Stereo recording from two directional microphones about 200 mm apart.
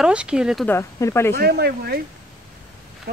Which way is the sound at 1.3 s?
50° right (ahead or behind).